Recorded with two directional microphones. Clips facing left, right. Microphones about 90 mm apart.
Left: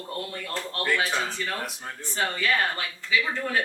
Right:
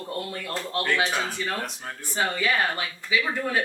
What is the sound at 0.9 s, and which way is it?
Speech, 15° right (ahead or behind).